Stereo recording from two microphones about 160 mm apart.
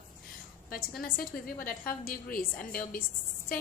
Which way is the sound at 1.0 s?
65° left (ahead or behind).